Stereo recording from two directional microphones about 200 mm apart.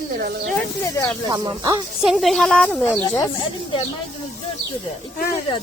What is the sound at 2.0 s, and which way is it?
A woman's voice, 5° right (ahead or behind).